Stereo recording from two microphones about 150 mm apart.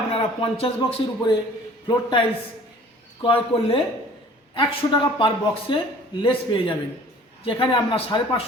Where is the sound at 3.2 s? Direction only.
35° left (ahead or behind).